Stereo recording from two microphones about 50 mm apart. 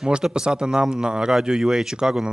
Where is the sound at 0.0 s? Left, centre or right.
Centre.